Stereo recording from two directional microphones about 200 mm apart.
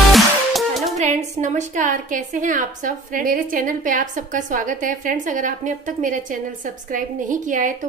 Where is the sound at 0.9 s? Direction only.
35° right (ahead or behind).